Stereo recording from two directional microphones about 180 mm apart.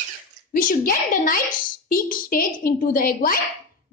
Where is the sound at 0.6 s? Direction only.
50° left (ahead or behind).